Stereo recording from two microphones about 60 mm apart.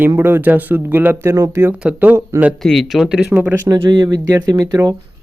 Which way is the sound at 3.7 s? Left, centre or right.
Right.